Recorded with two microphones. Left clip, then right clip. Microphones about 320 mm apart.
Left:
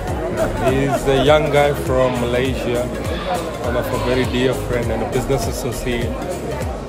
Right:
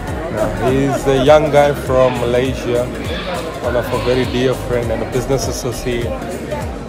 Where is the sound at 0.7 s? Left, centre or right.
Centre.